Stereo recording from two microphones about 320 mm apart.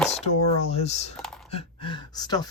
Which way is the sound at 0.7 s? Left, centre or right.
Centre.